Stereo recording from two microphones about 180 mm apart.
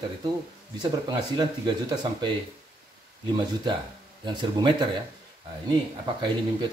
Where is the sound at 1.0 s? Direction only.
25° right (ahead or behind).